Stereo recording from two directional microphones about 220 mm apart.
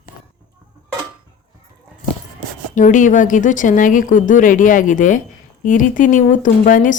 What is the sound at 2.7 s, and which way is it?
Speech, 35° left (ahead or behind).